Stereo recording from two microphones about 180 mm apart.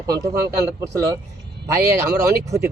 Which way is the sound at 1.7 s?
15° right (ahead or behind).